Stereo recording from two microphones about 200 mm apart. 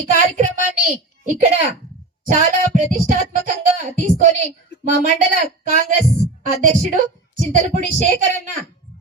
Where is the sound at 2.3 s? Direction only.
40° right (ahead or behind).